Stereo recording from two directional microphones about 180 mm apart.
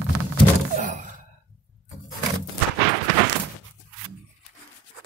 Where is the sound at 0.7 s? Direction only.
45° right (ahead or behind).